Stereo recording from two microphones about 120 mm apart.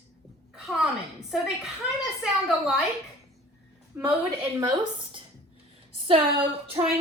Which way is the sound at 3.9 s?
15° right (ahead or behind).